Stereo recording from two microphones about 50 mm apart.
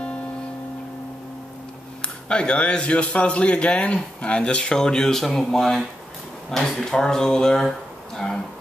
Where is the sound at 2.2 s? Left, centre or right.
Centre.